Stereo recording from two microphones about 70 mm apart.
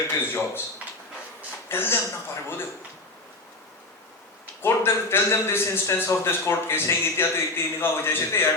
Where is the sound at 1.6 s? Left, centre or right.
Left.